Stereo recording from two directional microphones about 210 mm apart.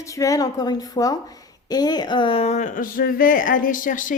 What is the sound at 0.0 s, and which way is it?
A woman's voice, 15° left (ahead or behind).